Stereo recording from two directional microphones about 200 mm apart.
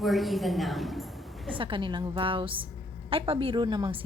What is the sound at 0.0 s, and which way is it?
A woman's voice, centre (ahead or behind).